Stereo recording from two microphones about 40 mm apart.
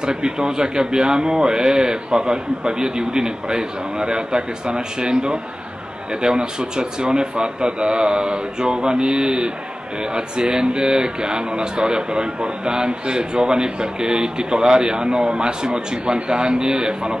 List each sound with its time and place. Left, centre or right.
0.0 s speech: centre